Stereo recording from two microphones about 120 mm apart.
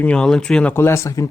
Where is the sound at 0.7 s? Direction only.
20° left (ahead or behind).